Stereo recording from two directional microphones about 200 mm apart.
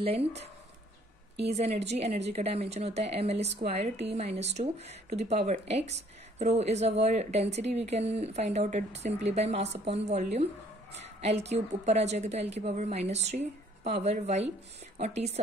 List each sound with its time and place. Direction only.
0.0 s speech: 30° right (ahead or behind)
1.4 s speech: 30° right (ahead or behind)